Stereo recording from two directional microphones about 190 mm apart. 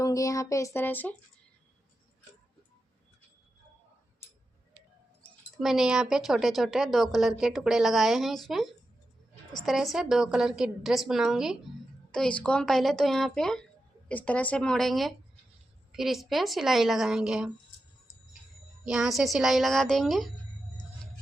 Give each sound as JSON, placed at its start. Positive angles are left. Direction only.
{"t": 0.0, "sound": "speech", "side_deg": 20}
{"t": 5.5, "sound": "speech", "side_deg": 0}
{"t": 18.9, "sound": "speech", "side_deg": 0}